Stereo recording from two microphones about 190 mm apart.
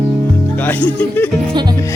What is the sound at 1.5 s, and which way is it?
Music, 20° right (ahead or behind).